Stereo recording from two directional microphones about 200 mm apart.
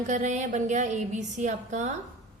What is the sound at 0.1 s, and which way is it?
A woman's voice, 40° right (ahead or behind).